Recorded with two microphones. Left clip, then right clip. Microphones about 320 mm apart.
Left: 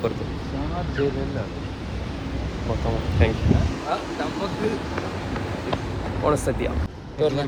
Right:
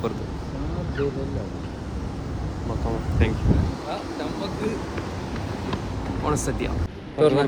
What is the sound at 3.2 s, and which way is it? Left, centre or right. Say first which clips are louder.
Speech: left 3 dB; centre.